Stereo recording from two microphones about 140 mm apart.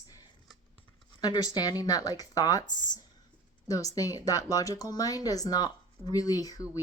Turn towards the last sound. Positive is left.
turn(degrees=25)  # may be behind; listen again after turning